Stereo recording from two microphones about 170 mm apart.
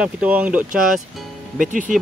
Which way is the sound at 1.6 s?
50° right (ahead or behind).